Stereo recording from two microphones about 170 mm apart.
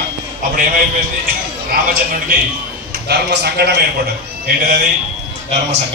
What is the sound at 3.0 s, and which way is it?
Speech, 70° right (ahead or behind).